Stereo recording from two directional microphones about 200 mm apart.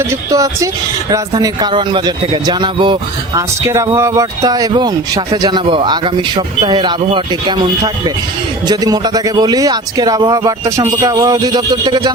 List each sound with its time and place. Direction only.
0.0 s a man's voice: 15° right (ahead or behind)
8.6 s a man's voice: 20° right (ahead or behind)